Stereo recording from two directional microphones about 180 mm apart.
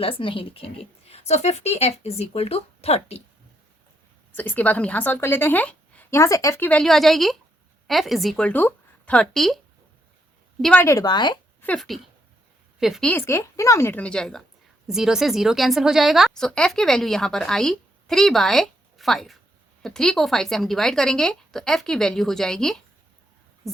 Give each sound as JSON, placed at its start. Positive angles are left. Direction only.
{"t": 0.0, "sound": "speech", "side_deg": 30}
{"t": 4.4, "sound": "a woman's voice", "side_deg": 10}
{"t": 10.6, "sound": "a woman's voice", "side_deg": 5}
{"t": 10.8, "sound": "speech", "side_deg": 20}
{"t": 11.6, "sound": "a woman's voice", "side_deg": 5}